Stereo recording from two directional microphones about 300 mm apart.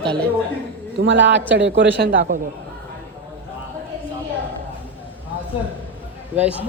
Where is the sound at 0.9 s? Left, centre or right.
Right.